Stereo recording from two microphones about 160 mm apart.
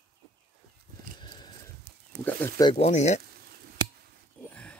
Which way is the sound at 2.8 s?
45° left (ahead or behind).